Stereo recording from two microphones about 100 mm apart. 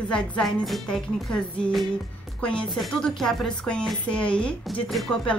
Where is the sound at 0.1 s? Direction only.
5° left (ahead or behind).